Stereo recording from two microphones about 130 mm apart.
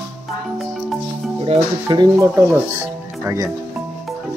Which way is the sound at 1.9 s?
25° right (ahead or behind).